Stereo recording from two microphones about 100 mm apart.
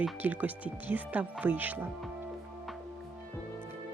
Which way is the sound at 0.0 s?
15° right (ahead or behind).